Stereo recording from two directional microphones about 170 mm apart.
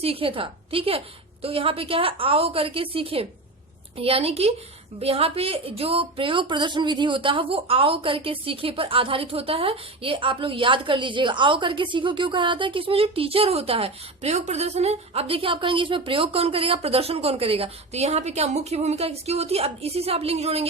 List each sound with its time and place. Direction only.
0.0 s speech: 35° right (ahead or behind)